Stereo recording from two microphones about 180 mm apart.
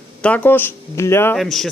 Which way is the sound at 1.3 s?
Centre (ahead or behind).